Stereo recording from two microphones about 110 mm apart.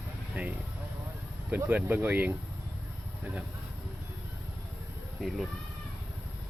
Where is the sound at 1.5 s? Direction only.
15° right (ahead or behind).